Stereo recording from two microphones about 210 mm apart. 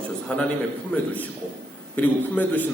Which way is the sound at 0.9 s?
5° left (ahead or behind).